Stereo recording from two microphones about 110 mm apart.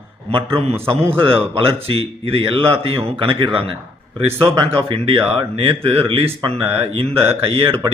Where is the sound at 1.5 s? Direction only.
55° right (ahead or behind).